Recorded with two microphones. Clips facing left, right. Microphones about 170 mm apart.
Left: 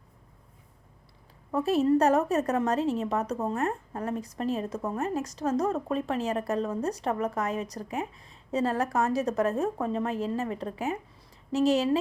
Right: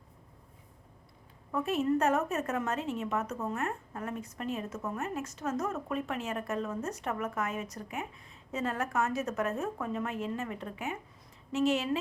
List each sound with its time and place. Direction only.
1.5 s a woman's voice: 35° left (ahead or behind)